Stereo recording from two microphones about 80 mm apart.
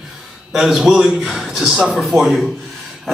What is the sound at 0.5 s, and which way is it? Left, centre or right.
A man's voice, centre.